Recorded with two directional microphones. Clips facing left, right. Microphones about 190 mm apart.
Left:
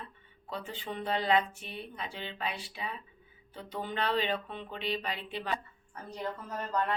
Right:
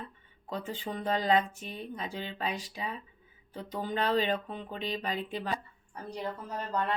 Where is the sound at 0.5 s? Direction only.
40° right (ahead or behind).